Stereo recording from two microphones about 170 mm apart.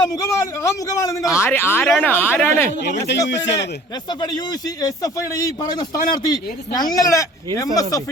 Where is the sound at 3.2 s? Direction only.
90° left.